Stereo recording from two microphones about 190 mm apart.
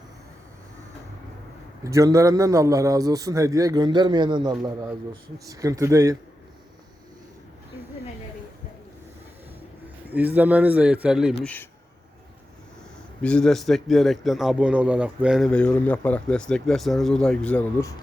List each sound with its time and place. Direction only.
1.8 s a man's voice: 15° right (ahead or behind)
10.1 s a man's voice: 10° right (ahead or behind)
11.4 s a man's voice: 10° left (ahead or behind)
13.2 s a man's voice: 5° left (ahead or behind)